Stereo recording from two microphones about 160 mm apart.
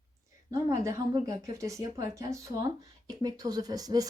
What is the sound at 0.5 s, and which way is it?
Speech, 20° right (ahead or behind).